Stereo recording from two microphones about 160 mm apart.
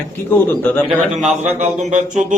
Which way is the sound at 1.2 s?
45° right (ahead or behind).